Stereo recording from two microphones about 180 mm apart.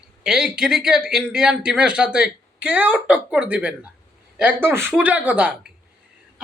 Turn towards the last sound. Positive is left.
turn(degrees=-10)  # may be behind; listen again after turning